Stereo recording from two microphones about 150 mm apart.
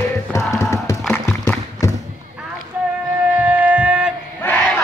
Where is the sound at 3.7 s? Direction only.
5° right (ahead or behind).